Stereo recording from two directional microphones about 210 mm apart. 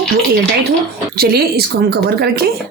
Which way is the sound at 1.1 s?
45° right (ahead or behind).